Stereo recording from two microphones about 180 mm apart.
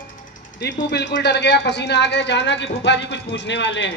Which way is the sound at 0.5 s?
70° left (ahead or behind).